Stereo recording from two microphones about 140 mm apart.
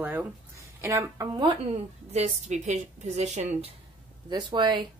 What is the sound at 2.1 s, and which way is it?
Speech, 55° right (ahead or behind).